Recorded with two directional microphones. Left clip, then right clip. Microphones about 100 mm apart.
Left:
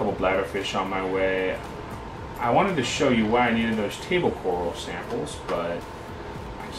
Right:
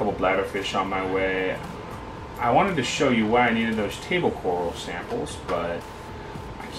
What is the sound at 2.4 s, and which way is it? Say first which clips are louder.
Speech: right 1 dB; 15° right (ahead or behind).